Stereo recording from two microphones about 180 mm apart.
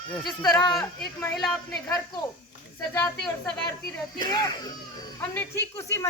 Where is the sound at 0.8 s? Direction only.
5° left (ahead or behind).